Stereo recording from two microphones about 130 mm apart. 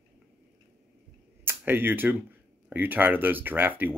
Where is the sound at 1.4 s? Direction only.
15° right (ahead or behind).